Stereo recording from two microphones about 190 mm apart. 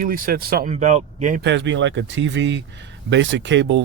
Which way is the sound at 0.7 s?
40° right (ahead or behind).